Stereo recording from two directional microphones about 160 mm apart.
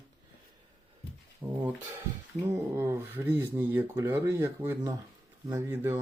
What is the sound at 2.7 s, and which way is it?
Speech, 15° right (ahead or behind).